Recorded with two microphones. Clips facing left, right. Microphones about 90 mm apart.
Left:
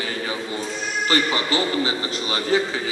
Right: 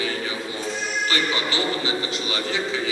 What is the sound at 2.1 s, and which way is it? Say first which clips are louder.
Speech: left 3 dB; 40° left (ahead or behind).